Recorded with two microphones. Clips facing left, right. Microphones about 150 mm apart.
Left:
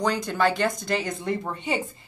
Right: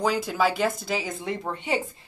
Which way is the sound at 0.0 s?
5° right (ahead or behind).